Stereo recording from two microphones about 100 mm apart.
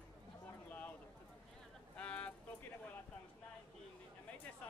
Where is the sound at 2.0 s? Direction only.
15° left (ahead or behind).